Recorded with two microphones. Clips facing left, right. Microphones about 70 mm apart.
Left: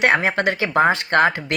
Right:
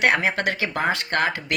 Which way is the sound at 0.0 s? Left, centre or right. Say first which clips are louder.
Left 3 dB; left.